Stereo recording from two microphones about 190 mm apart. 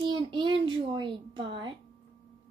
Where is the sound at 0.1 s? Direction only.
25° right (ahead or behind).